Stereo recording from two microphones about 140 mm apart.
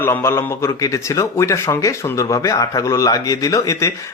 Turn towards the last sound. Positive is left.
turn(degrees=20)  # may be behind; listen again after turning